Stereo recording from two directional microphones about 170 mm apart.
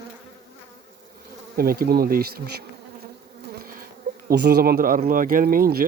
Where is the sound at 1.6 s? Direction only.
60° right (ahead or behind).